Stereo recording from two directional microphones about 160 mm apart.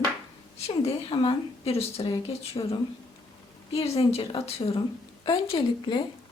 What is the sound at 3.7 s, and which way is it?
Speech, 40° left (ahead or behind).